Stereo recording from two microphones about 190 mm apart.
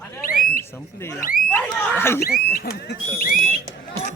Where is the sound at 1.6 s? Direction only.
10° left (ahead or behind).